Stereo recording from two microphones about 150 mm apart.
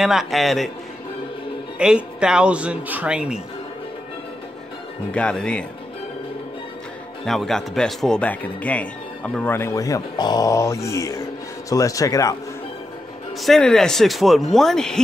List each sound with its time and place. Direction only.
0.0 s speech: centre (ahead or behind)
1.8 s speech: 5° right (ahead or behind)
5.1 s speech: 5° left (ahead or behind)
7.2 s speech: centre (ahead or behind); by 12.4 s 20° left (ahead or behind)
13.4 s speech: 5° left (ahead or behind)